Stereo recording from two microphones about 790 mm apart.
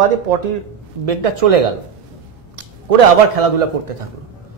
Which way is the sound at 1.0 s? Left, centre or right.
Right.